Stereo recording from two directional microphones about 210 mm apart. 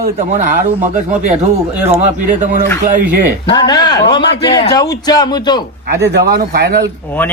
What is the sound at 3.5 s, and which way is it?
A man's voice, 20° left (ahead or behind).